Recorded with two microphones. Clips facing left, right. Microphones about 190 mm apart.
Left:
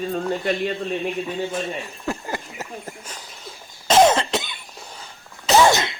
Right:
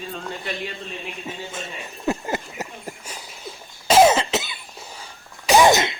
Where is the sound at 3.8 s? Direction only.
10° right (ahead or behind).